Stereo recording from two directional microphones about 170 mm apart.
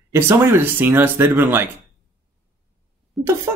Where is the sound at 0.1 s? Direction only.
15° right (ahead or behind).